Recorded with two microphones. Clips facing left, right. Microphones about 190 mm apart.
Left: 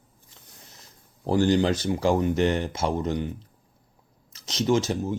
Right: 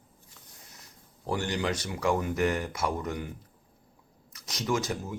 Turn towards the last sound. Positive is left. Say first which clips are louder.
# left 7 dB
turn(degrees=25)  # may be behind; listen again after turning